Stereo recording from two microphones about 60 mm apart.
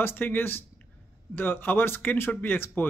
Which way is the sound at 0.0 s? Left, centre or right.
Left.